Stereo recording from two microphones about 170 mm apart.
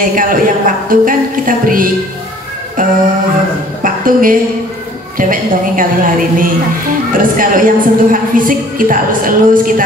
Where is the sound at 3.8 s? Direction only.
55° right (ahead or behind).